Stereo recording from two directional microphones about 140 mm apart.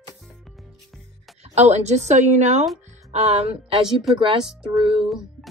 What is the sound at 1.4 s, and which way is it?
A woman's voice, 50° right (ahead or behind).